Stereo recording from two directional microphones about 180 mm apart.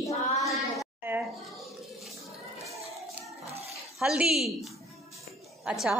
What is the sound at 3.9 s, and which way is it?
A woman's voice, 5° right (ahead or behind).